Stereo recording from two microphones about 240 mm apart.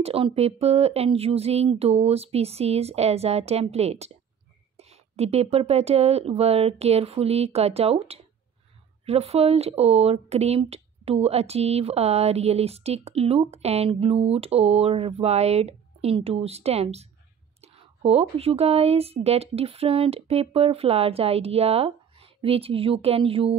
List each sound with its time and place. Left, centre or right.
0.0 s speech: right